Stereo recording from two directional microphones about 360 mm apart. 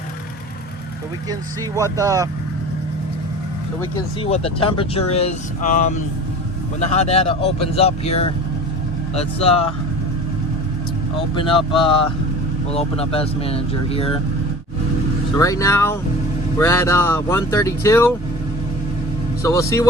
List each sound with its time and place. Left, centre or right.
1.3 s speech: centre
3.8 s speech: centre
11.3 s speech: centre
15.4 s speech: centre
19.4 s speech: centre